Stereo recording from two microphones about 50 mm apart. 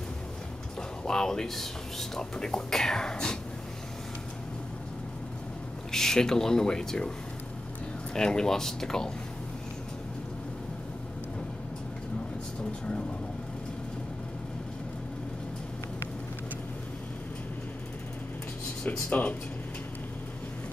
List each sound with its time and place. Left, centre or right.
1.0 s speech: centre
5.9 s speech: centre
8.1 s speech: centre
18.9 s speech: left